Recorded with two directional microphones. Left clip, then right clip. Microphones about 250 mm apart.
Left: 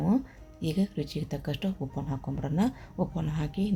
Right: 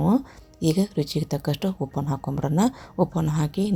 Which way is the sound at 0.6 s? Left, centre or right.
Right.